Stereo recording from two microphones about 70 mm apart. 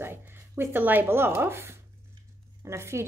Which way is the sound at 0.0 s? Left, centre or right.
Right.